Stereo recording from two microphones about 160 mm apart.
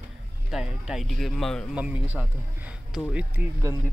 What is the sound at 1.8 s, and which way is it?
Speech, 10° right (ahead or behind).